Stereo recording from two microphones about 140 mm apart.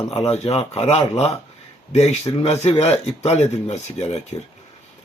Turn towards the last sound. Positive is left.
turn(degrees=50)  # may be behind; listen again after turning